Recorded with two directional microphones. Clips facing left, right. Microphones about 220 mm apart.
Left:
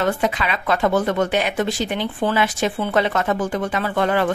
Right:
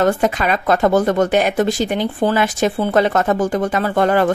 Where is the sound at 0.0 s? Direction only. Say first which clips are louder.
Right 5 dB; 45° right (ahead or behind).